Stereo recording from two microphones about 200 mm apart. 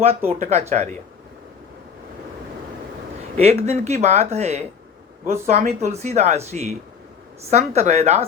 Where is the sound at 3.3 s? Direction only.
30° right (ahead or behind).